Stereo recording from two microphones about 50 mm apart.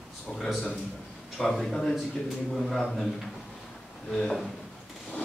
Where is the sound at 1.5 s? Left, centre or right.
Centre.